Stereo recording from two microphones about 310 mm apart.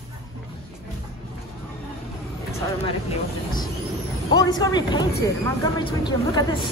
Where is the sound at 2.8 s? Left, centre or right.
Centre.